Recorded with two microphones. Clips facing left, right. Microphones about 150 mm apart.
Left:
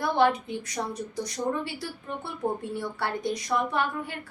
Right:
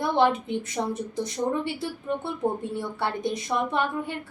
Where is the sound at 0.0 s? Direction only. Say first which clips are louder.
Right 1 dB; 20° right (ahead or behind).